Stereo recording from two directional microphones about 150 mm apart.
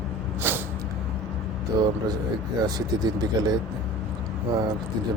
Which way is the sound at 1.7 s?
25° right (ahead or behind).